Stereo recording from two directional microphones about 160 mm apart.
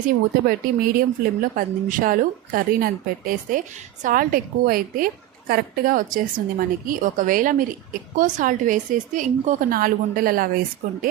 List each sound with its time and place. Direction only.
0.4 s a woman's voice: 65° right (ahead or behind)